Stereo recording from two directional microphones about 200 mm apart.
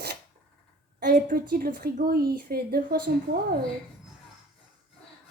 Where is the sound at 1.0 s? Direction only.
45° right (ahead or behind).